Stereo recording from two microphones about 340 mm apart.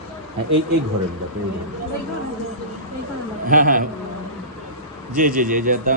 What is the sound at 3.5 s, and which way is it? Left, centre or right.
Speech, right.